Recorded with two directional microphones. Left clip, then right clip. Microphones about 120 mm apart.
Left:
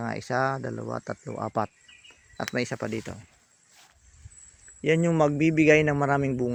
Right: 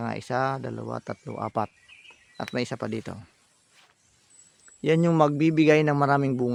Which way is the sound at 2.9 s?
25° right (ahead or behind).